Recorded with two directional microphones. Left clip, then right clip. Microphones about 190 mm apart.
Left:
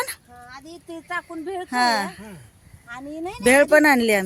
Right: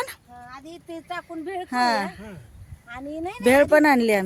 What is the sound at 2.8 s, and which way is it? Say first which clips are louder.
Speech: even; 15° right (ahead or behind).